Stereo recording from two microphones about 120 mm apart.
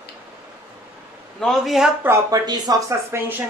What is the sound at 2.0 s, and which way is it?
Speech, 25° right (ahead or behind).